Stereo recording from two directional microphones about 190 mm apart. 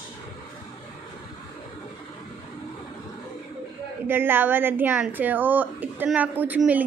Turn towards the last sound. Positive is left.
turn(degrees=-10)  # may be behind; listen again after turning